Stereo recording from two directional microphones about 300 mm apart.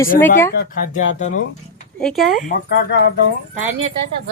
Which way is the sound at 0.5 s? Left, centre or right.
Left.